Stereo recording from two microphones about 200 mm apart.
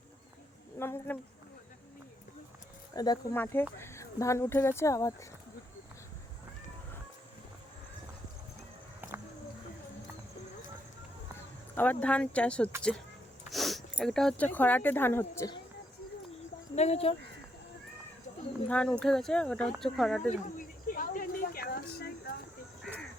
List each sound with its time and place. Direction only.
0.8 s speech: 10° left (ahead or behind)
2.9 s speech: 20° left (ahead or behind)
11.7 s speech: 10° left (ahead or behind)
16.7 s speech: 35° left (ahead or behind)
18.7 s speech: 5° left (ahead or behind)
20.3 s a sound: 45° left (ahead or behind)